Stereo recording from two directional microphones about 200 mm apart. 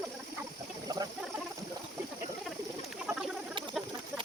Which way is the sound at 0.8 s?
20° right (ahead or behind).